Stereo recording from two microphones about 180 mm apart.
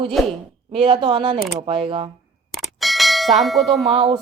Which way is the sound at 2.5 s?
Centre (ahead or behind).